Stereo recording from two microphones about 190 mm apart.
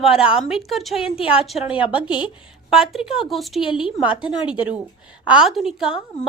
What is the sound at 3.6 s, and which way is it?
Speech, 25° left (ahead or behind).